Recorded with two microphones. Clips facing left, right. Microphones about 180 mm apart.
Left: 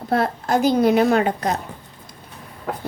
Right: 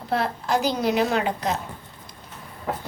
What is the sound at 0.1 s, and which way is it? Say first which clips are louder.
A woman's voice: left 4 dB; 50° left (ahead or behind).